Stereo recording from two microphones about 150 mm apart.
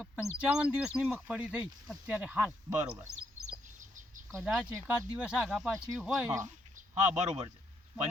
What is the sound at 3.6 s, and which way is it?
Chicken, 60° right (ahead or behind).